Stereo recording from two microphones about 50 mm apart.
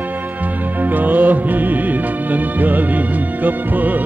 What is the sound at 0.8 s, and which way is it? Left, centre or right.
Music, right.